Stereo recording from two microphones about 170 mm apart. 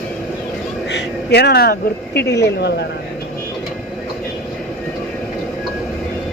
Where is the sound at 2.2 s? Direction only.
75° left (ahead or behind).